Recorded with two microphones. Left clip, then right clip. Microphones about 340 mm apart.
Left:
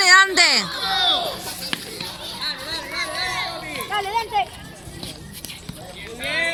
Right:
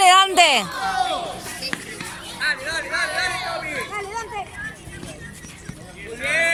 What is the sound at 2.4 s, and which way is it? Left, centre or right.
Music, right.